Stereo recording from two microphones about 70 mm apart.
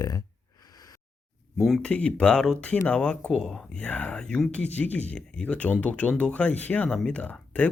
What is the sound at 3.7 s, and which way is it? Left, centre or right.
Speech, centre.